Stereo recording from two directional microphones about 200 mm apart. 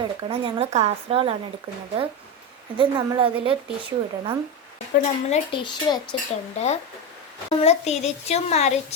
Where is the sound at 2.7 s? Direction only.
25° right (ahead or behind).